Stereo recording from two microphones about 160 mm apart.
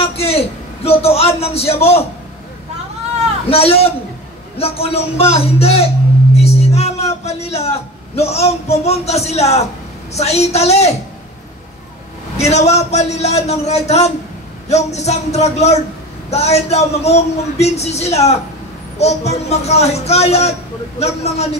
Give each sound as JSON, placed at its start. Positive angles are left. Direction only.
{"t": 0.0, "sound": "a sound", "side_deg": 40}
{"t": 0.8, "sound": "speech", "side_deg": 40}
{"t": 3.4, "sound": "a man's voice", "side_deg": 40}
{"t": 12.4, "sound": "a man's voice", "side_deg": 45}